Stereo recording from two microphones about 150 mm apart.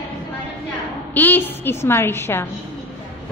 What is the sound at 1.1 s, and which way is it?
A woman's voice, 10° left (ahead or behind).